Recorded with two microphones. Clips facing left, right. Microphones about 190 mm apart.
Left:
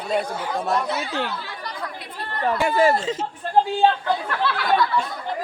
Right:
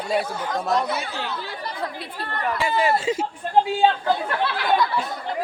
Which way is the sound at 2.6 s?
45° left (ahead or behind).